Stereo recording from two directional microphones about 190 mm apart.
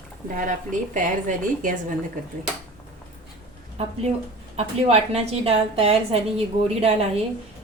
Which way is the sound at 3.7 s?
35° right (ahead or behind).